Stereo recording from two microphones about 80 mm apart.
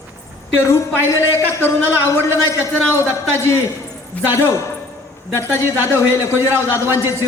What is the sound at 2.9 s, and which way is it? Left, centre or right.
Speech, left.